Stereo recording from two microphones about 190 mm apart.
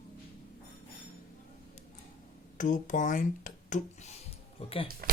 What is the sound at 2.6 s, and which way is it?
Speech, 40° left (ahead or behind).